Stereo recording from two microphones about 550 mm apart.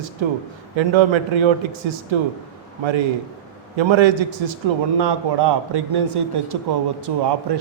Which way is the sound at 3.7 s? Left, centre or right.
Right.